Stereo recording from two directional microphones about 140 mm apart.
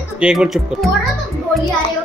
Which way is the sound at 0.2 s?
5° right (ahead or behind).